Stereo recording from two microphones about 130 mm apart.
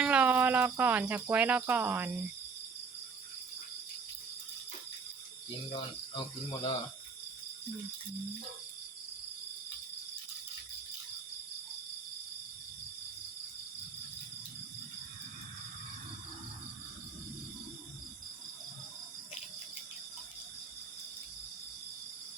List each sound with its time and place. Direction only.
0.0 s speech: 10° right (ahead or behind)
5.7 s cricket: 40° left (ahead or behind)